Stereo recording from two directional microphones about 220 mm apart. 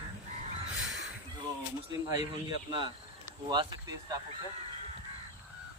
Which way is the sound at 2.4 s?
20° right (ahead or behind).